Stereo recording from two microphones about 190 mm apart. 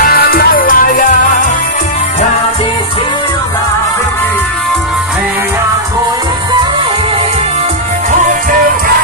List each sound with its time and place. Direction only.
0.0 s music: 55° left (ahead or behind)
8.1 s music: 45° right (ahead or behind)